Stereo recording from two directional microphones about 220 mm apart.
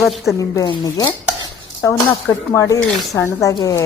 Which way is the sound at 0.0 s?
Centre (ahead or behind).